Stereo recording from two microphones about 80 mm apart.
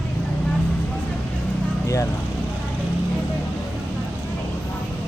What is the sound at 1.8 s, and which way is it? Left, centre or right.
Speech, left.